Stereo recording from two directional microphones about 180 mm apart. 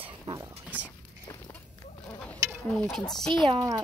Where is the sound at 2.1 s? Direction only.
10° left (ahead or behind).